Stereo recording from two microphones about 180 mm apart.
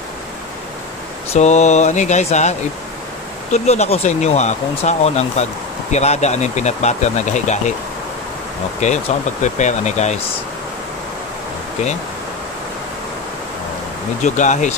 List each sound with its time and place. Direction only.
1.3 s speech: 40° left (ahead or behind)
3.5 s speech: 35° left (ahead or behind)
8.8 s speech: 40° left (ahead or behind)
14.2 s speech: 40° left (ahead or behind)